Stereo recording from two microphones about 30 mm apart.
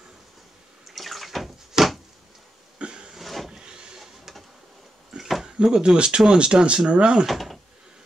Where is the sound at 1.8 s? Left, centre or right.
Centre.